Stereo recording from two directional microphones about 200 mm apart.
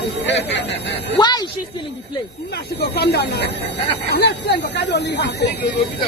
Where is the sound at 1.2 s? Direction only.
20° left (ahead or behind).